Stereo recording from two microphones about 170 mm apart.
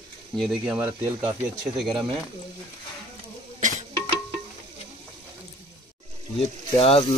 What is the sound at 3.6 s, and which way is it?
Music, 50° right (ahead or behind).